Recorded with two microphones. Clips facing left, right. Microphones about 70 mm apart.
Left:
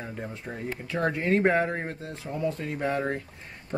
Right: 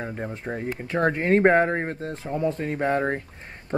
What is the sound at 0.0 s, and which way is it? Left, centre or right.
Speech, right.